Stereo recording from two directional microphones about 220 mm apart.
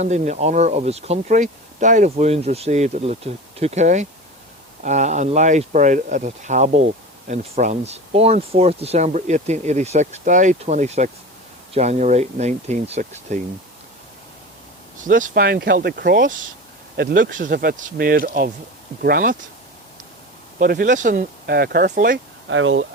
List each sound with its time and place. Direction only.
0.0 s speech: 30° right (ahead or behind)
15.0 s speech: 35° right (ahead or behind)
20.6 s speech: 40° right (ahead or behind)
22.4 s speech: 60° right (ahead or behind)